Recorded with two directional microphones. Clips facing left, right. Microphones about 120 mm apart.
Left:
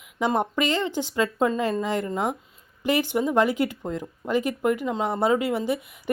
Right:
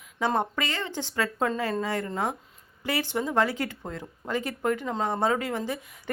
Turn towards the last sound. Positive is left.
turn(degrees=15)  # may be behind; listen again after turning